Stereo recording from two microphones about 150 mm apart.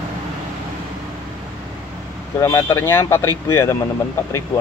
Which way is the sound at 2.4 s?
20° left (ahead or behind).